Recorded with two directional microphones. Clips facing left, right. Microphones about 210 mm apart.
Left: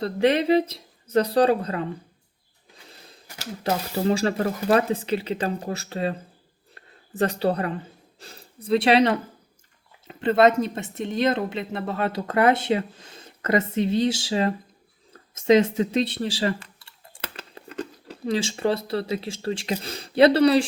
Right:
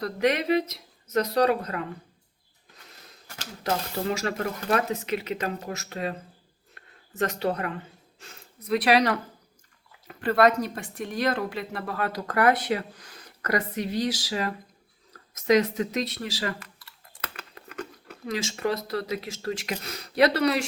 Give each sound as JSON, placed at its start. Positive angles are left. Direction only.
{"t": 0.0, "sound": "speech", "side_deg": 30}
{"t": 3.9, "sound": "speech", "side_deg": 30}